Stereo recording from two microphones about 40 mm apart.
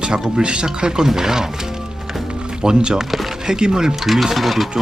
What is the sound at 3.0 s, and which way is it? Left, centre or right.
Music, centre.